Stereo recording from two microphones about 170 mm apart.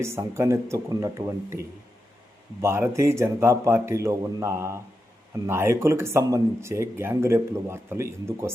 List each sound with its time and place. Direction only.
0.0 s speech: 15° right (ahead or behind)